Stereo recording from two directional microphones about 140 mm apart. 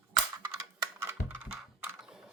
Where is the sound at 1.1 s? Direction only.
15° right (ahead or behind).